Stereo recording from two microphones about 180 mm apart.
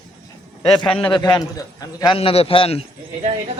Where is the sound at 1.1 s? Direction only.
20° left (ahead or behind).